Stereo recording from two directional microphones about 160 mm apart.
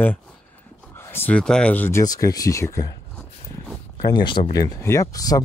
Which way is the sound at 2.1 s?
20° left (ahead or behind).